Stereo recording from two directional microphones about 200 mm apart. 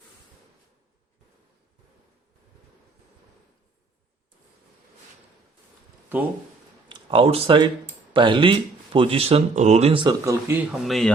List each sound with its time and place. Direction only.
6.8 s speech: 25° right (ahead or behind)
10.5 s speech: 5° right (ahead or behind)